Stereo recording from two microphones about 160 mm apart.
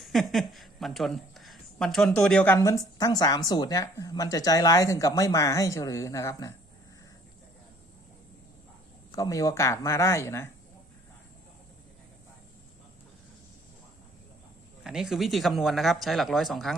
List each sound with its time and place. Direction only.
0.0 s a woman's voice: centre (ahead or behind); by 6.5 s 20° left (ahead or behind)
9.1 s speech: 20° left (ahead or behind)
14.8 s speech: 5° right (ahead or behind)